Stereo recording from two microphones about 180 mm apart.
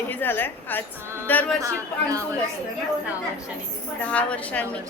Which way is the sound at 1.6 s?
20° right (ahead or behind).